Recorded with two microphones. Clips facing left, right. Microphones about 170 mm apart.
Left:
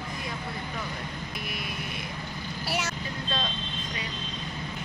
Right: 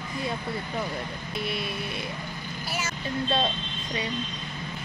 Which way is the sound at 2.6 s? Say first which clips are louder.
Left 2 dB; 75° left (ahead or behind).